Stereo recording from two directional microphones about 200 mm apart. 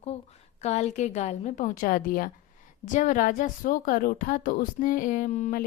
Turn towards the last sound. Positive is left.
turn(degrees=40)  # may be behind; listen again after turning